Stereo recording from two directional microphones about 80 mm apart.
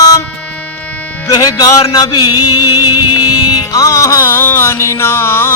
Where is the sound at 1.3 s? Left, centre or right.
Left.